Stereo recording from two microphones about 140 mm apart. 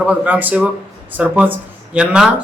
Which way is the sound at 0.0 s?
10° right (ahead or behind).